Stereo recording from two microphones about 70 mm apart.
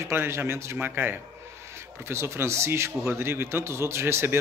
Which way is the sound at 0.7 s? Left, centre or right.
Right.